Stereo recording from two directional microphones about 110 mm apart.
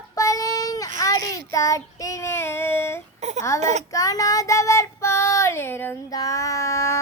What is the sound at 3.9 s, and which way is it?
Child singing, 35° left (ahead or behind).